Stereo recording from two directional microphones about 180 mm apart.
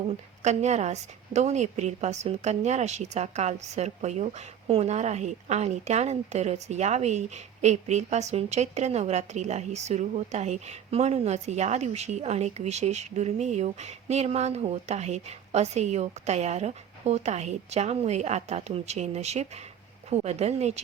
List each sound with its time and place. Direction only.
0.4 s a woman's voice: 40° right (ahead or behind)